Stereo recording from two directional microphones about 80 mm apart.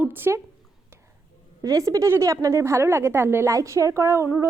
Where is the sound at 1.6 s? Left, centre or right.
Right.